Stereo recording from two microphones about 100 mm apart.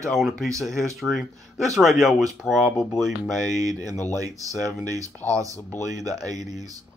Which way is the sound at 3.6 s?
35° right (ahead or behind).